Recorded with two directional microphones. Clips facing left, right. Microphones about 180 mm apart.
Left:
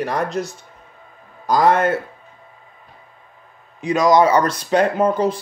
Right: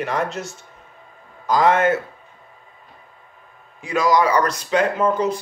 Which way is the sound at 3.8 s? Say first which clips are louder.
Left 4 dB; 20° left (ahead or behind).